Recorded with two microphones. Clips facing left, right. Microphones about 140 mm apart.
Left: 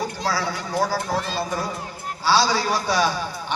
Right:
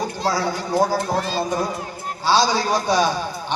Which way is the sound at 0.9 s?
40° right (ahead or behind).